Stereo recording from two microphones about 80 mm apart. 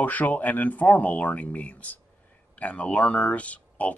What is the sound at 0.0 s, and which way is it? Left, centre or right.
Speech, left.